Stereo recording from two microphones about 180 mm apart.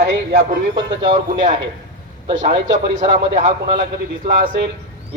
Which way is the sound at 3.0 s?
30° right (ahead or behind).